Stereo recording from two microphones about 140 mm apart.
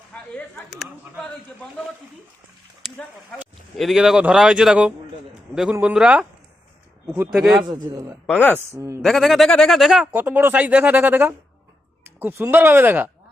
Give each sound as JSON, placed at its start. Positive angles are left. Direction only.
{"t": 0.1, "sound": "a sound", "side_deg": 10}
{"t": 0.7, "sound": "speech", "side_deg": 0}
{"t": 3.8, "sound": "a man's voice", "side_deg": 0}
{"t": 7.3, "sound": "speech", "side_deg": -5}
{"t": 7.7, "sound": "a man's voice", "side_deg": -20}
{"t": 9.0, "sound": "speech", "side_deg": 0}